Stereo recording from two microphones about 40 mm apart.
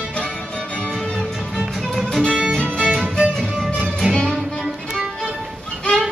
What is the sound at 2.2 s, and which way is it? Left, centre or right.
Music, right.